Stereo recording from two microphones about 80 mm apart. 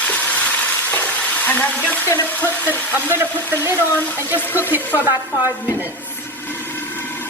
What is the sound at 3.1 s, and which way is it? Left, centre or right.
Speech, right.